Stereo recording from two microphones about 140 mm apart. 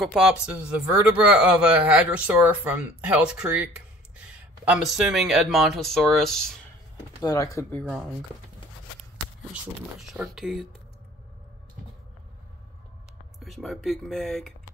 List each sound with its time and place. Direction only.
0.0 s speech: centre (ahead or behind)
7.2 s speech: 25° left (ahead or behind)
7.7 s speech: 10° left (ahead or behind)
9.5 s speech: 5° right (ahead or behind)
13.4 s speech: centre (ahead or behind)